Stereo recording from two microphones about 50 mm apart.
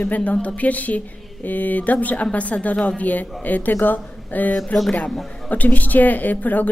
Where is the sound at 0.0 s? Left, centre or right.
Left.